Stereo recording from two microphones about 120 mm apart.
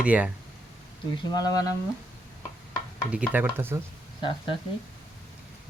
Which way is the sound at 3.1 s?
15° right (ahead or behind).